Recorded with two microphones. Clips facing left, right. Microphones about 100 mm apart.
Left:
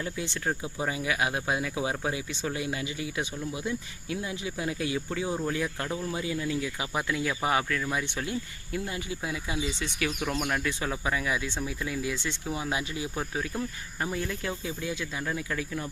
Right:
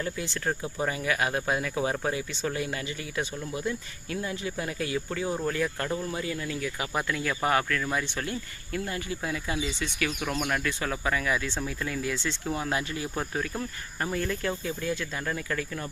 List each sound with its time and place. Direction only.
0.0 s speech: 15° left (ahead or behind)